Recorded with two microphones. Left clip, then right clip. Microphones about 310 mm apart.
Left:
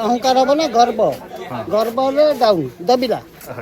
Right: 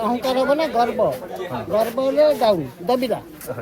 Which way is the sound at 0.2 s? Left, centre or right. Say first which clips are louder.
Left 6 dB; centre.